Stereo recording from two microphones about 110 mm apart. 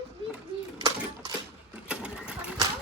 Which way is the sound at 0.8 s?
40° right (ahead or behind).